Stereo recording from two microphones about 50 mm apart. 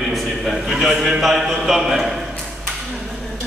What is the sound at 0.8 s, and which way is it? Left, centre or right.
Speech, centre.